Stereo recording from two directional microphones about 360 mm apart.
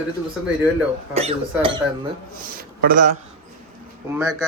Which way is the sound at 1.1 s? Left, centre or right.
Centre.